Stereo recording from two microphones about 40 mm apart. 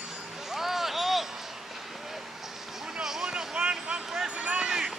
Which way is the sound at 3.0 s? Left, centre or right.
Centre.